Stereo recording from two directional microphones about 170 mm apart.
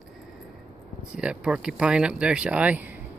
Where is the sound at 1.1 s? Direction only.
5° right (ahead or behind).